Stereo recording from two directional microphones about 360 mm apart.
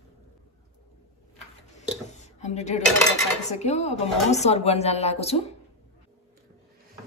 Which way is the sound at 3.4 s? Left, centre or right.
Centre.